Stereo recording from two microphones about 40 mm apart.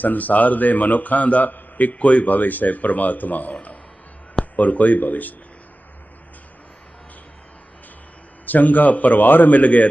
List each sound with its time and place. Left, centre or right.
0.0 s a man's voice: left
8.4 s a man's voice: left